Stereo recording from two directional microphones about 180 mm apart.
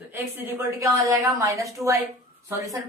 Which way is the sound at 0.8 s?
15° right (ahead or behind).